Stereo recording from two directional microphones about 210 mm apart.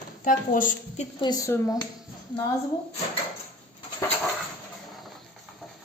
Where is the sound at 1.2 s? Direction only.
15° left (ahead or behind).